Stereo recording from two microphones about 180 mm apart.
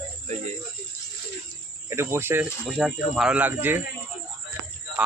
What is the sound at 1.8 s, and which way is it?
Cricket, 15° right (ahead or behind).